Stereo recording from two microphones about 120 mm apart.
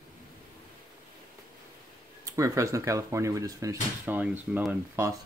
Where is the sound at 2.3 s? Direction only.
25° right (ahead or behind).